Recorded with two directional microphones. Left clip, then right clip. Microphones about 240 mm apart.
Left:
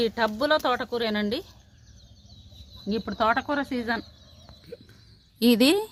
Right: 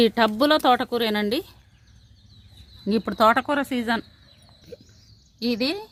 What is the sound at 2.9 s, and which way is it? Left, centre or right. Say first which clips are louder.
Speech: right 6 dB; right.